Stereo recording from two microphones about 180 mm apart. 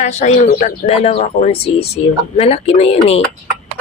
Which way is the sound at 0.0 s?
40° left (ahead or behind).